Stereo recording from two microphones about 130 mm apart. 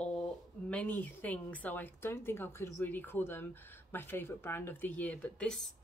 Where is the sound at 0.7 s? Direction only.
10° left (ahead or behind).